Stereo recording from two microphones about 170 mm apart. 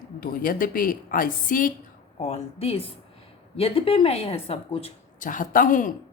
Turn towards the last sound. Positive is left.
turn(degrees=50)  # may be behind; listen again after turning